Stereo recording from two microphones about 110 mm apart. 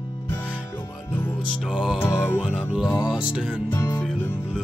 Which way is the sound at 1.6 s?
5° right (ahead or behind).